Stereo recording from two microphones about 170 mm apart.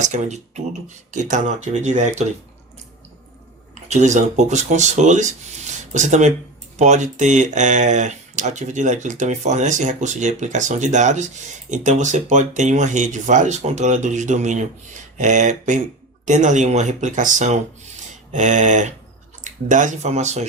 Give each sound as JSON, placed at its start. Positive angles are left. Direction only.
{"t": 0.0, "sound": "speech", "side_deg": -45}
{"t": 3.8, "sound": "speech", "side_deg": -45}